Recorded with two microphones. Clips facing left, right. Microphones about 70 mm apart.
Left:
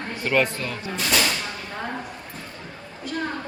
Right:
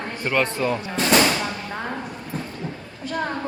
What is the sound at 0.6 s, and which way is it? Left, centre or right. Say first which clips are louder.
Speech: right 6 dB; right.